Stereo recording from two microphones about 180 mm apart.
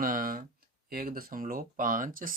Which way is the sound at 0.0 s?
50° right (ahead or behind).